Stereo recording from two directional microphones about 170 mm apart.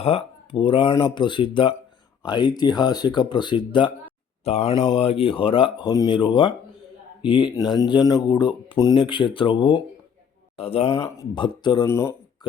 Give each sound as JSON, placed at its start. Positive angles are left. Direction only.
{"t": 0.0, "sound": "speech", "side_deg": 35}
{"t": 11.9, "sound": "speech", "side_deg": 15}